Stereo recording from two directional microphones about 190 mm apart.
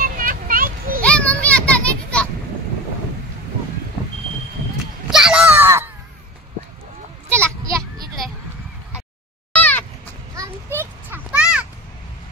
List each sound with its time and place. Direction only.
0.0 s a sound: 45° right (ahead or behind)
1.0 s children playing: 5° left (ahead or behind)
5.1 s a sound: 5° right (ahead or behind)
7.2 s children playing: 15° right (ahead or behind)
9.5 s cat: 10° left (ahead or behind)
10.3 s children playing: 15° right (ahead or behind)